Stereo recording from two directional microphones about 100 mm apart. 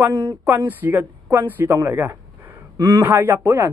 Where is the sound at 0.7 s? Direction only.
20° right (ahead or behind).